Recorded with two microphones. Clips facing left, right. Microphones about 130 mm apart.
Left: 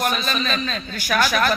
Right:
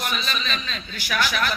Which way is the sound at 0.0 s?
45° left (ahead or behind).